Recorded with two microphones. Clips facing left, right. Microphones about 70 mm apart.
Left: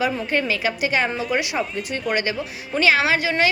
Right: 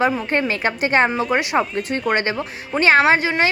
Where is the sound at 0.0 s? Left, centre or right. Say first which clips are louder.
Right 3 dB; right.